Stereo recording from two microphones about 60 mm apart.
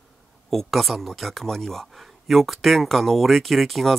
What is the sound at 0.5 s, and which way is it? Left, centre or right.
Speech, centre.